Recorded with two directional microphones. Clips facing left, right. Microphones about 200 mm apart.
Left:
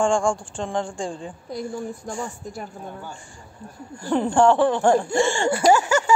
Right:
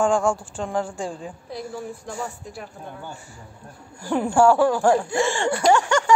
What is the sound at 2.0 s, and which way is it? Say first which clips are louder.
Speech: left 1 dB; 45° left (ahead or behind).